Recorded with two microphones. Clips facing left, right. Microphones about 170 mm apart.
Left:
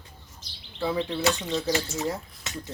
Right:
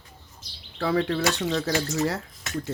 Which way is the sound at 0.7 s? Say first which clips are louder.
Right 3 dB; 80° right.